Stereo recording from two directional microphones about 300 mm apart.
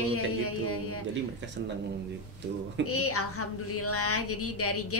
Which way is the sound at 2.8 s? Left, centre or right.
Left.